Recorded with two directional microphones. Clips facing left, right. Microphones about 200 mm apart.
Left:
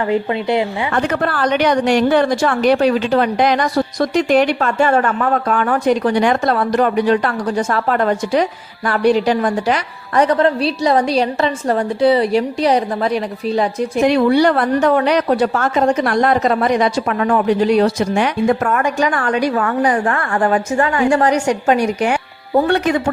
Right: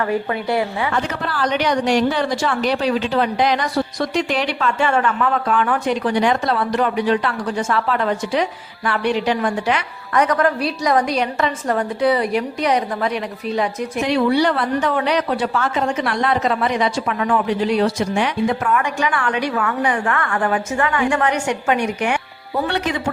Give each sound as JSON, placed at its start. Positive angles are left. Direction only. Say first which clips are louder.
{"t": 0.1, "sound": "a woman's voice", "louder": "left 4 dB", "side_deg": 20}
{"t": 0.9, "sound": "a woman's voice", "louder": "left 5 dB", "side_deg": 55}
{"t": 14.1, "sound": "a woman's voice", "louder": "left 2 dB", "side_deg": 50}
{"t": 22.6, "sound": "a woman's voice", "louder": "left 4 dB", "side_deg": 50}